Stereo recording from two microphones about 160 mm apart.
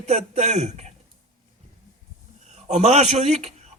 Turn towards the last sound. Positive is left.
turn(degrees=-45)  # may be behind; listen again after turning